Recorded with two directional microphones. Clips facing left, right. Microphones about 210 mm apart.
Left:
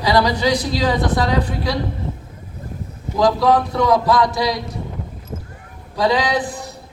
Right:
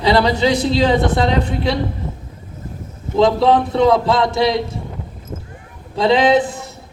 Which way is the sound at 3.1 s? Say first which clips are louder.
Right 2 dB; 25° right (ahead or behind).